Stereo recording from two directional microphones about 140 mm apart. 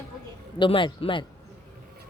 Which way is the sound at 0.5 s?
35° left (ahead or behind).